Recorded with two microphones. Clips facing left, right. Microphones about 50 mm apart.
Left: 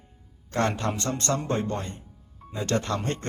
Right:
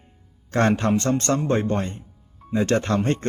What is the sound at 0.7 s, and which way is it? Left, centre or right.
Speech, right.